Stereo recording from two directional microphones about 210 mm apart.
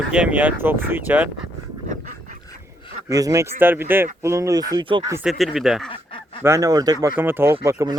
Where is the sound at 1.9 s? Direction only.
35° right (ahead or behind).